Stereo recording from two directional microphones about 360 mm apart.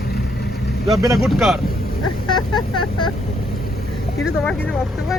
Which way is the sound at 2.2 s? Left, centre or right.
Centre.